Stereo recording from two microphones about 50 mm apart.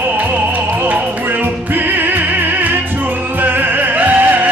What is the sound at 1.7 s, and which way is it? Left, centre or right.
Music, right.